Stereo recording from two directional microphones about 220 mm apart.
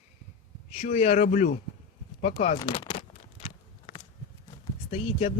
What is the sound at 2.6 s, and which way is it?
Speech, 20° left (ahead or behind).